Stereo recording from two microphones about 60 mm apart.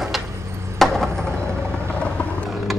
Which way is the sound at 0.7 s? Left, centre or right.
Centre.